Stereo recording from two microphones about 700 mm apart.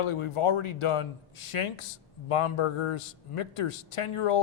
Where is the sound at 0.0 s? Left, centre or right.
Left.